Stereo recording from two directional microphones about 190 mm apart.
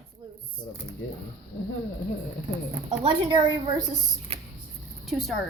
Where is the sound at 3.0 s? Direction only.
30° right (ahead or behind).